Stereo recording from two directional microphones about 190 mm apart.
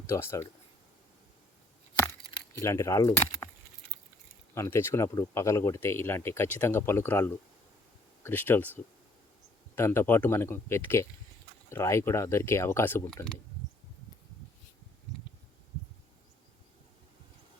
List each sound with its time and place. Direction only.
0.1 s speech: 15° left (ahead or behind)
2.6 s speech: 15° left (ahead or behind)
4.5 s speech: 15° left (ahead or behind)